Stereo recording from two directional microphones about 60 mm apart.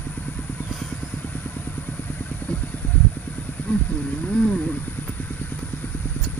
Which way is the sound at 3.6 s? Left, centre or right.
Left.